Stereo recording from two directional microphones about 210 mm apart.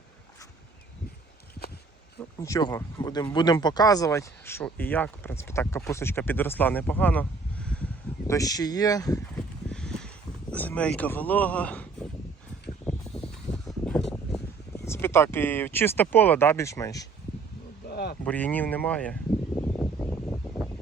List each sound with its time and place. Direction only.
2.4 s speech: 15° left (ahead or behind)
8.3 s speech: 15° left (ahead or behind)
9.4 s a sound: 5° left (ahead or behind)
10.5 s speech: 10° left (ahead or behind)
12.8 s a sound: 5° left (ahead or behind)
14.8 s speech: 10° left (ahead or behind)
17.8 s insect: 50° left (ahead or behind)
18.3 s speech: 5° left (ahead or behind)
19.5 s a sound: 10° left (ahead or behind)